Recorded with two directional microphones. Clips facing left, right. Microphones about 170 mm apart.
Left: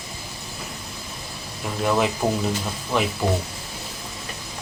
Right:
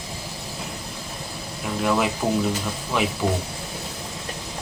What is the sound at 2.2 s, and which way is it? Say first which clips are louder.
Speech: even; 20° left (ahead or behind).